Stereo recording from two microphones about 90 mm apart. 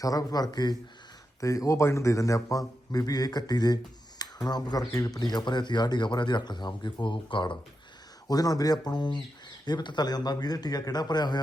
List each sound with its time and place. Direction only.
0.0 s a man's voice: 40° left (ahead or behind)
1.4 s a man's voice: 40° left (ahead or behind); by 7.6 s 70° left (ahead or behind)
8.3 s a man's voice: 45° left (ahead or behind)